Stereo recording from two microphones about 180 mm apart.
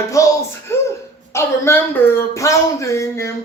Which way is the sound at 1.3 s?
15° left (ahead or behind).